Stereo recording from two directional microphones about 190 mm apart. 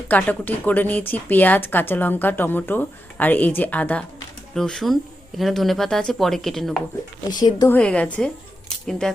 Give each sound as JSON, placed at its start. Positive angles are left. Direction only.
{"t": 0.1, "sound": "speech", "side_deg": 10}
{"t": 7.3, "sound": "speech", "side_deg": 20}
{"t": 7.8, "sound": "speech", "side_deg": 5}